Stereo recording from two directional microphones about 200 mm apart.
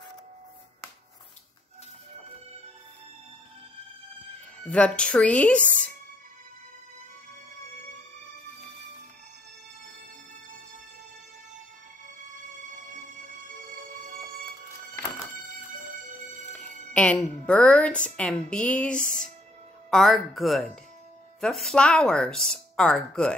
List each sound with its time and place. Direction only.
4.6 s speech: 5° left (ahead or behind)
16.9 s a woman's voice: 5° left (ahead or behind)